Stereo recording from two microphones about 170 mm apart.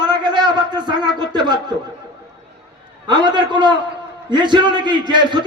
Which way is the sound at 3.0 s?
25° right (ahead or behind).